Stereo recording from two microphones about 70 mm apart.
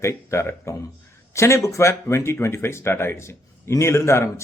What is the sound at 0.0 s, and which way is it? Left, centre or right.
Speech, left.